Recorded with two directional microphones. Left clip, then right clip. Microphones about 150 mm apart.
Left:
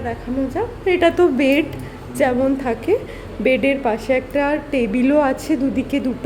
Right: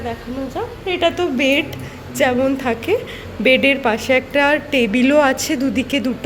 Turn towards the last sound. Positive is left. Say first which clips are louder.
# right 2 dB
turn(degrees=10)  # may be behind; listen again after turning